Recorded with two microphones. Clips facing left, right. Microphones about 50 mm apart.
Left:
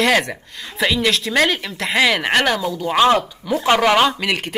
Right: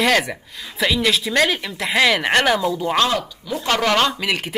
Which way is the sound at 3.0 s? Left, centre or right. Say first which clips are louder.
Left 6 dB; left.